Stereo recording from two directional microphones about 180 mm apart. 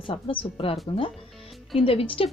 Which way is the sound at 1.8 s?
30° left (ahead or behind).